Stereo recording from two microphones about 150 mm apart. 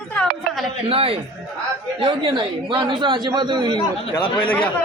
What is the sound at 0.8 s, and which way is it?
A man's voice, 40° right (ahead or behind).